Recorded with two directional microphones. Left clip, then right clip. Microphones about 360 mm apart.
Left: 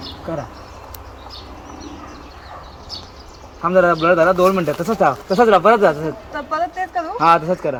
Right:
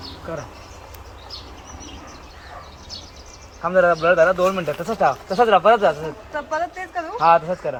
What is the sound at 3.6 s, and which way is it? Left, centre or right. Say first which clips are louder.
Speech: left 2 dB; left.